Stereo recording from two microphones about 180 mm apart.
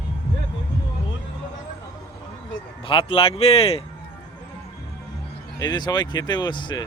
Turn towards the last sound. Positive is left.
turn(degrees=25)  # may be behind; listen again after turning